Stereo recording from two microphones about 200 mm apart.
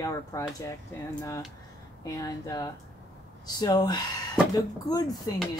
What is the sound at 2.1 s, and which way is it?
Speech, 15° left (ahead or behind).